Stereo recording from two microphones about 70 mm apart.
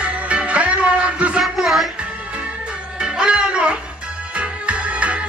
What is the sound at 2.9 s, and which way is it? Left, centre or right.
Music, centre.